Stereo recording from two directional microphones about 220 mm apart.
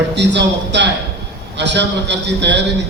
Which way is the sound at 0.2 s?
50° right (ahead or behind).